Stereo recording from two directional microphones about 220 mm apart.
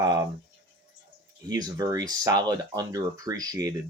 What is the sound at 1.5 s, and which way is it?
Speech, 15° right (ahead or behind).